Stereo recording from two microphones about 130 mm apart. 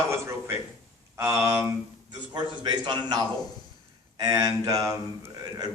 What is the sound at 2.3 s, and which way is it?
A man's voice, 35° right (ahead or behind).